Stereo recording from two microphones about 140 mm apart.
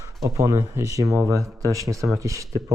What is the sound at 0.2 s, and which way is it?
Speech, 25° right (ahead or behind).